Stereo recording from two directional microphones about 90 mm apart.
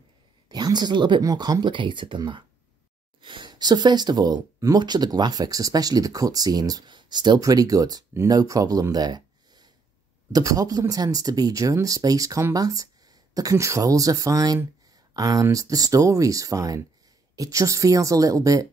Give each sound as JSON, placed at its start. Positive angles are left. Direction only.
{"t": 0.5, "sound": "speech", "side_deg": -50}
{"t": 1.2, "sound": "speech", "side_deg": -45}